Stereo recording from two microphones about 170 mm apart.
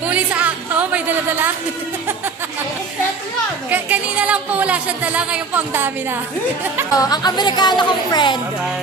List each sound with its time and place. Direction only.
0.1 s music: 10° right (ahead or behind)
3.7 s speech: 10° right (ahead or behind)
6.9 s speech: 20° left (ahead or behind)